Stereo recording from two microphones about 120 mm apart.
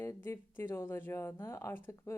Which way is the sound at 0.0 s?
20° left (ahead or behind).